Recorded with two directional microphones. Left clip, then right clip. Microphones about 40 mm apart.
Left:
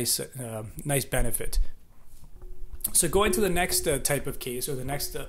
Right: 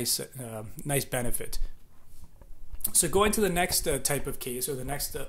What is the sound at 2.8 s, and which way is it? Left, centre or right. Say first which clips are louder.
Speech: left 1 dB; left.